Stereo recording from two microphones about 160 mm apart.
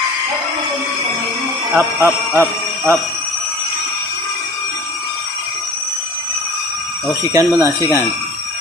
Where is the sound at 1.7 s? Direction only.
10° right (ahead or behind).